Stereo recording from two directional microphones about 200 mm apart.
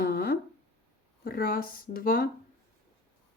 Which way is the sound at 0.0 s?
50° left (ahead or behind).